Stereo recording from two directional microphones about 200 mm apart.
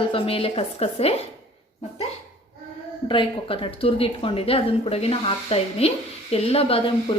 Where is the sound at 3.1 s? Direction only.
25° left (ahead or behind).